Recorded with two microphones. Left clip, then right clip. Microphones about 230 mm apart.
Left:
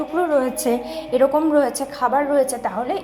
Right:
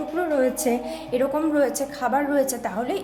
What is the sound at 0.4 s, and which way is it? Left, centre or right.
A woman's voice, centre.